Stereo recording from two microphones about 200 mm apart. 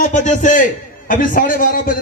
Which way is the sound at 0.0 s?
40° left (ahead or behind).